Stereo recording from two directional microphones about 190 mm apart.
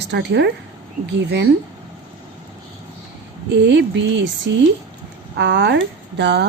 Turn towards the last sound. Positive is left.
turn(degrees=-60)  # may be behind; listen again after turning